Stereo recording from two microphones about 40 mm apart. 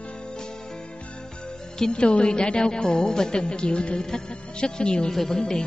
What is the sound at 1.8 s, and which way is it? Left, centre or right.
Speech, left.